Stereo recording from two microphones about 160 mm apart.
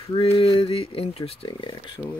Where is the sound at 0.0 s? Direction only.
35° left (ahead or behind).